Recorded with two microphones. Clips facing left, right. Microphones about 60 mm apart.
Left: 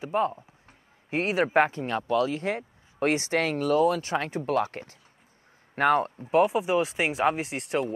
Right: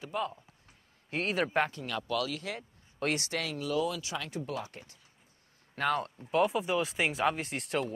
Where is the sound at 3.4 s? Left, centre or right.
Left.